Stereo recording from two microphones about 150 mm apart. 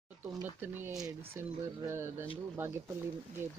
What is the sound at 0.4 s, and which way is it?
Speech, 15° right (ahead or behind).